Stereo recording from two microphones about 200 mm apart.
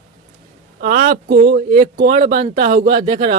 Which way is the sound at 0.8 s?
45° right (ahead or behind).